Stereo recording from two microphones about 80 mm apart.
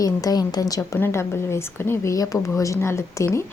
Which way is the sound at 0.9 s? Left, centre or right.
Left.